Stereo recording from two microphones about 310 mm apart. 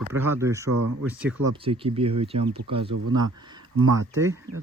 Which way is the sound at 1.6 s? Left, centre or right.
Centre.